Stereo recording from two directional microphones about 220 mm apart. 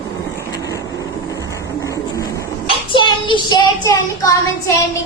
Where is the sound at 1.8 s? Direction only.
15° left (ahead or behind).